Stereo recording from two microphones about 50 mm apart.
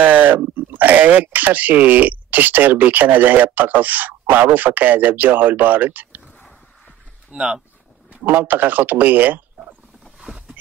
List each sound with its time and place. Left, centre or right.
0.0 s speech: right
7.3 s speech: centre
8.1 s speech: right
10.2 s boat: centre